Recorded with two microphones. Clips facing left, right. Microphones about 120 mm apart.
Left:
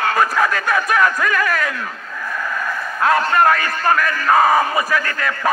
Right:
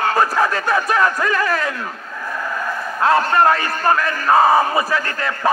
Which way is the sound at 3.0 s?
30° right (ahead or behind).